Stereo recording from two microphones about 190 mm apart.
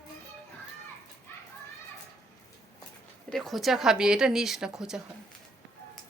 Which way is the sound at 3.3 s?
Centre (ahead or behind).